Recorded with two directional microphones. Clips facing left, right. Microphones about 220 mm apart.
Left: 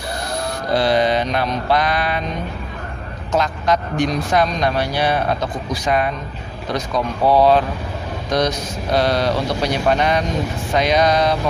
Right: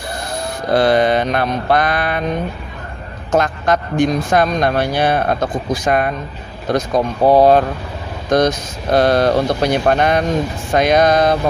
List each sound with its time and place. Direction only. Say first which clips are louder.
0.7 s speech: right 4 dB; 55° right (ahead or behind)
3.3 s speech: right 3 dB; 50° right (ahead or behind)